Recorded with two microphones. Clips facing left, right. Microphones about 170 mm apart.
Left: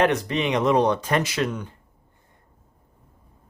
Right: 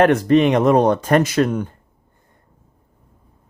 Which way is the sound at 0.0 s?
50° right (ahead or behind).